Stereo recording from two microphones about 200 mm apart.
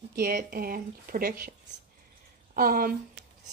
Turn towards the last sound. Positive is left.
turn(degrees=-45)  # may be behind; listen again after turning